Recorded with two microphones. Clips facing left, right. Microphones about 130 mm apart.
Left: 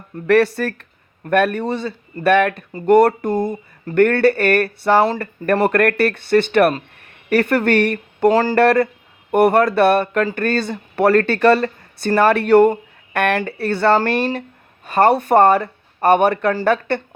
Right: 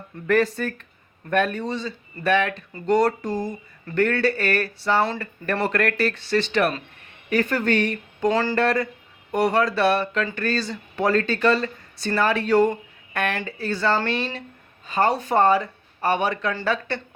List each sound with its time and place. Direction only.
0.3 s speech: 75° left (ahead or behind)
8.3 s speech: 40° left (ahead or behind)
8.5 s speech: 65° left (ahead or behind)
14.8 s speech: 65° left (ahead or behind)